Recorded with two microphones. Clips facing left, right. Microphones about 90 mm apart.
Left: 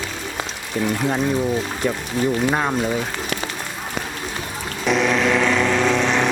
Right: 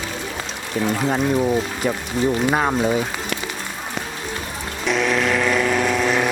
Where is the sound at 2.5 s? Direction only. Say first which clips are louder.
Right 1 dB; 10° right (ahead or behind).